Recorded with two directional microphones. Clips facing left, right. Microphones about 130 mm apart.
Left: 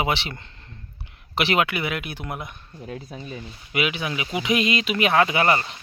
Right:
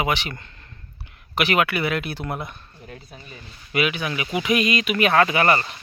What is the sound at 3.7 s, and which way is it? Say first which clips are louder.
Speech: right 2 dB; 20° left (ahead or behind).